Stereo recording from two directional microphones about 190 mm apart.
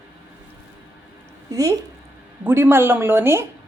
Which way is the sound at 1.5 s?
20° right (ahead or behind).